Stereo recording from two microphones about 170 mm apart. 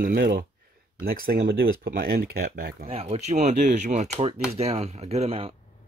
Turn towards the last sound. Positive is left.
turn(degrees=-35)  # may be behind; listen again after turning